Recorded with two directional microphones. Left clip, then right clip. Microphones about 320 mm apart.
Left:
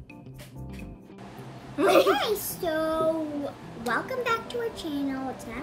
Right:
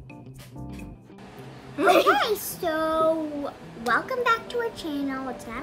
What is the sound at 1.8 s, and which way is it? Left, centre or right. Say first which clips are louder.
Speech: right 1 dB; centre.